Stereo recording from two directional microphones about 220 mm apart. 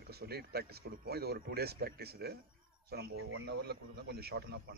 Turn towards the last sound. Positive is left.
turn(degrees=-45)  # may be behind; listen again after turning